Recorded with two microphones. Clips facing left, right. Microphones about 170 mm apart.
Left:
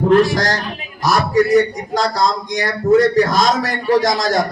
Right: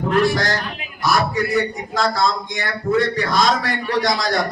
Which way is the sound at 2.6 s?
40° left (ahead or behind).